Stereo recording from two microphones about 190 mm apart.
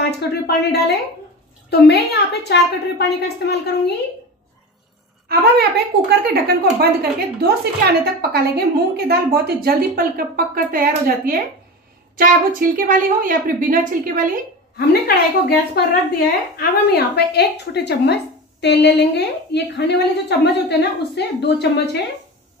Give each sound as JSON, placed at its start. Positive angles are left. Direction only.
{"t": 0.0, "sound": "a woman's voice", "side_deg": 60}
{"t": 5.3, "sound": "a woman's voice", "side_deg": -55}
{"t": 14.9, "sound": "a woman's voice", "side_deg": 55}